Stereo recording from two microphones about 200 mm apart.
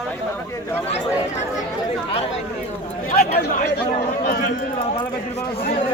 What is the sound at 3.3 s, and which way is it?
Chatter, 50° left (ahead or behind).